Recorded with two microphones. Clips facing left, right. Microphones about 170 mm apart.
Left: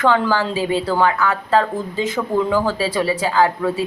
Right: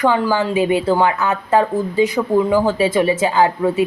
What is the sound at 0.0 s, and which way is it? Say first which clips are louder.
A woman's voice: right 1 dB; 15° right (ahead or behind).